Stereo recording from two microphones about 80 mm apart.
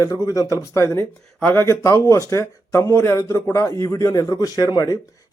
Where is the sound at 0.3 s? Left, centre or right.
Left.